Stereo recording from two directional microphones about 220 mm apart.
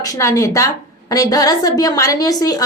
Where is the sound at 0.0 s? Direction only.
15° left (ahead or behind).